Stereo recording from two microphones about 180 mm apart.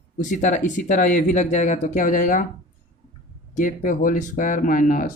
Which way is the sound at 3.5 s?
45° left (ahead or behind).